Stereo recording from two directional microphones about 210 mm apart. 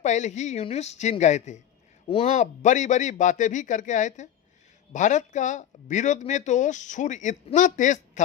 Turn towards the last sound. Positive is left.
turn(degrees=35)  # may be behind; listen again after turning